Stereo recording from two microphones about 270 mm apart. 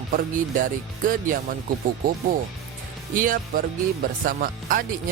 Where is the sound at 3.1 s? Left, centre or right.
Right.